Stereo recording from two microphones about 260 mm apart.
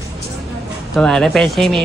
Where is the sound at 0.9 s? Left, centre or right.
Centre.